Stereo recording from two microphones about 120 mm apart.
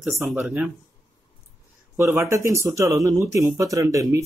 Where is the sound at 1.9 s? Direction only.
20° right (ahead or behind).